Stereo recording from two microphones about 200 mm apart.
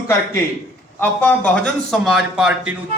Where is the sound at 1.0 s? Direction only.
5° left (ahead or behind).